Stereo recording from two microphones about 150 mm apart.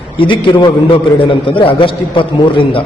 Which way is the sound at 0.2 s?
35° left (ahead or behind).